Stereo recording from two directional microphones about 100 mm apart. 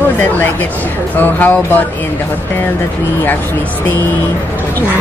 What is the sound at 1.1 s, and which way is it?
Speech, 20° left (ahead or behind).